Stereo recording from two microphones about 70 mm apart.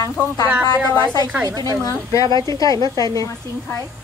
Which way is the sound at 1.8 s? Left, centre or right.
Left.